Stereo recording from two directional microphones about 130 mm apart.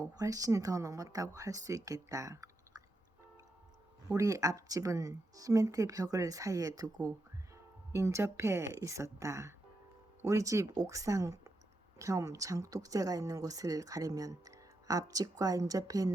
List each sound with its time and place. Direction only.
0.0 s speech: 30° right (ahead or behind)
4.1 s speech: 25° right (ahead or behind)